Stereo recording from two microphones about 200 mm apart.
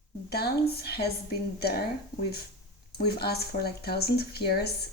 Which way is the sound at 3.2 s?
50° left (ahead or behind).